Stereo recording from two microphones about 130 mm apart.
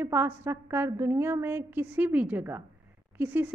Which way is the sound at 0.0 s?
15° right (ahead or behind).